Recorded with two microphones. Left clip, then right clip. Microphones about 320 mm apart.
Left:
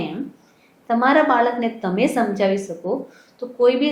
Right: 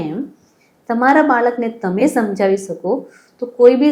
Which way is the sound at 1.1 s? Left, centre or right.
Right.